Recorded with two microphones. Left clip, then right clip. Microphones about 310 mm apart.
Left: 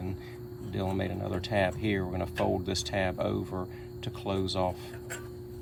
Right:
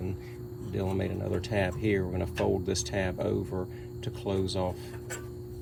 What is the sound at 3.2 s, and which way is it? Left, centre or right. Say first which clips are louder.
Speech: right 1 dB; left.